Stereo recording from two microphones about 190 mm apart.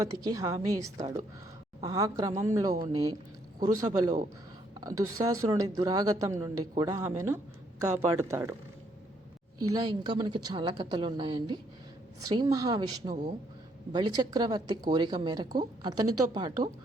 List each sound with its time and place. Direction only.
0.0 s speech: 20° right (ahead or behind)
9.7 s speech: 25° right (ahead or behind)